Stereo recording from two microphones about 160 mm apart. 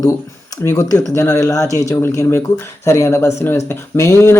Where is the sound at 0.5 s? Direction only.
20° left (ahead or behind).